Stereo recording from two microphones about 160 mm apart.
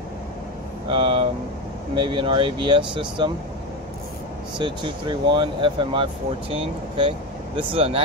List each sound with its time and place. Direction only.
0.8 s vehicle: 35° right (ahead or behind)
2.0 s speech: 30° right (ahead or behind)
4.6 s speech: 30° right (ahead or behind)